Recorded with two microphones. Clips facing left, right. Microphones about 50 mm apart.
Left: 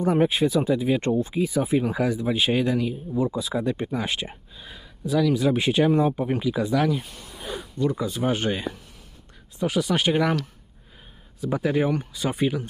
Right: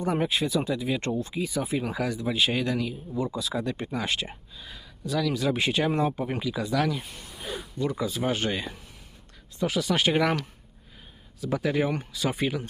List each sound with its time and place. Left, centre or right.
0.0 s speech: left; by 4.4 s centre
4.5 s speech: centre
7.8 s speech: centre
11.4 s speech: centre